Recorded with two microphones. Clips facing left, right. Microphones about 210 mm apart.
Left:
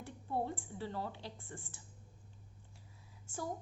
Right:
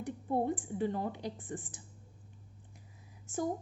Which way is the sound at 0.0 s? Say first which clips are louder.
Right 6 dB; 20° right (ahead or behind).